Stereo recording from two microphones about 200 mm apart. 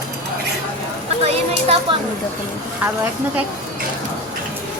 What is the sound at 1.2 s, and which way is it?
Speech, 30° right (ahead or behind).